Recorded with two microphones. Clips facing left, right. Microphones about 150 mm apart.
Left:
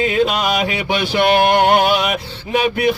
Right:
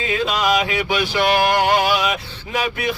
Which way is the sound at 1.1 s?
60° left (ahead or behind).